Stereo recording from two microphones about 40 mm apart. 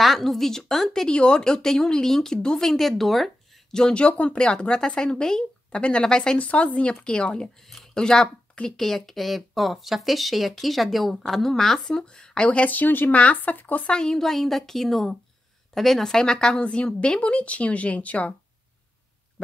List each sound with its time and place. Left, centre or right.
0.0 s speech: centre
1.0 s speech: left
2.3 s a woman's voice: left
2.6 s speech: centre
3.9 s a woman's voice: left
6.3 s a woman's voice: left; by 11.9 s centre
11.9 s a woman's voice: centre
12.4 s speech: left
13.1 s speech: left
13.8 s a woman's voice: centre
14.2 s speech: centre
16.5 s a woman's voice: left